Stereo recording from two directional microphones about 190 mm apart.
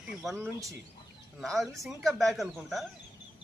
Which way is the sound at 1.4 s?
Centre (ahead or behind).